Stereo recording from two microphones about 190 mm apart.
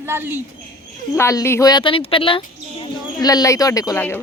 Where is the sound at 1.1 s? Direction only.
15° left (ahead or behind).